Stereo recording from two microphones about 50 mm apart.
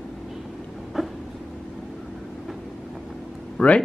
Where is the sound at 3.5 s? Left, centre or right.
Left.